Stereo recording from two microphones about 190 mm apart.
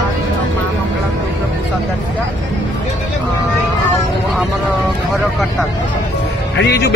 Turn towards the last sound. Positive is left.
turn(degrees=60)  # may be behind; listen again after turning